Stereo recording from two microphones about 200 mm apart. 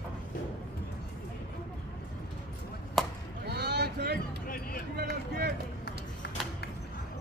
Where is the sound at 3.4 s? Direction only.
55° right (ahead or behind).